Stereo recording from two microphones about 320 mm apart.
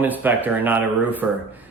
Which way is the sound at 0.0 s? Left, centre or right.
Centre.